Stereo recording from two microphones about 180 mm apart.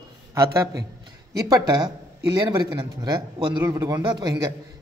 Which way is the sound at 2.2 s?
20° right (ahead or behind).